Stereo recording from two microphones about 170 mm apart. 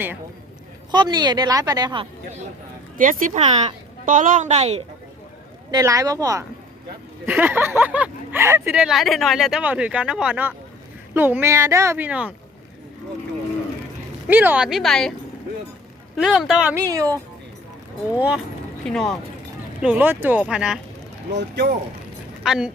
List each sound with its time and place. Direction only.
0.9 s a woman's voice: 25° right (ahead or behind)
3.0 s a woman's voice: 50° right (ahead or behind)
5.7 s a woman's voice: 20° right (ahead or behind)
7.3 s speech: 10° right (ahead or behind)
8.8 s speech: centre (ahead or behind)
14.3 s speech: 10° right (ahead or behind)
16.1 s speech: centre (ahead or behind)
16.7 s a woman's voice: 20° right (ahead or behind)
18.1 s speech: 10° right (ahead or behind)
18.9 s speech: 5° left (ahead or behind)
19.8 s speech: 10° right (ahead or behind)
21.3 s speech: 75° right (ahead or behind)
22.4 s speech: 5° right (ahead or behind)